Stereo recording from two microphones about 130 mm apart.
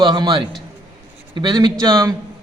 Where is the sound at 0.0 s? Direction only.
35° right (ahead or behind).